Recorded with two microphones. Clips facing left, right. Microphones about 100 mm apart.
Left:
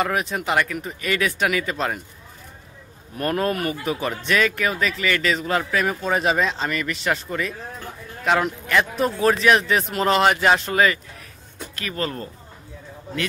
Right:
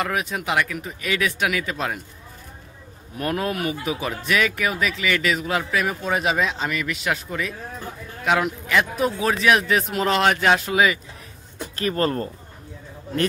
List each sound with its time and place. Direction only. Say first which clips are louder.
0.0 s speech: left 2 dB; centre (ahead or behind)
3.2 s speech: left 2 dB; 5° right (ahead or behind)
11.7 s speech: right 6 dB; 40° right (ahead or behind)